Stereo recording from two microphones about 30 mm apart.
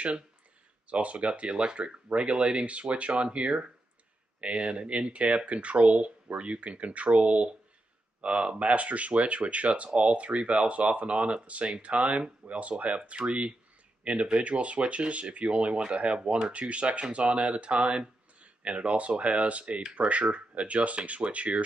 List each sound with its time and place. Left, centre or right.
0.8 s speech: right
2.0 s speech: right
13.2 s speech: right